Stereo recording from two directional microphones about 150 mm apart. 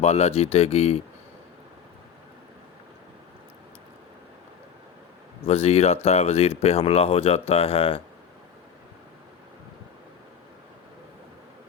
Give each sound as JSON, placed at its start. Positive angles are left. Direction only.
{"t": 0.0, "sound": "speech", "side_deg": 45}
{"t": 5.4, "sound": "speech", "side_deg": 45}